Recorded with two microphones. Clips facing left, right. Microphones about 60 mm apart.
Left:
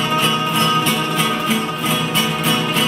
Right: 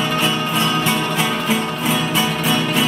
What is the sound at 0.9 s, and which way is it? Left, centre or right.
Music, centre.